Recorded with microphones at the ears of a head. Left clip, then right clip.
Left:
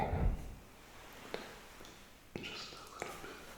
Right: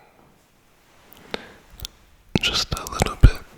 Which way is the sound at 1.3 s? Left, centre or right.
Right.